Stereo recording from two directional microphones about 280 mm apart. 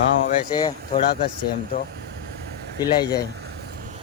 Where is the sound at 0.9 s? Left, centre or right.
Left.